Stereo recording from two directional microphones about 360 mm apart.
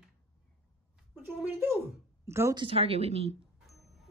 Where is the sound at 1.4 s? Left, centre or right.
Centre.